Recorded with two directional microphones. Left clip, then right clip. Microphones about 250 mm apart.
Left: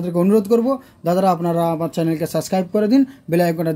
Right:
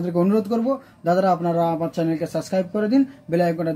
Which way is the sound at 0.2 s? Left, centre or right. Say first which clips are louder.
Left 6 dB; left.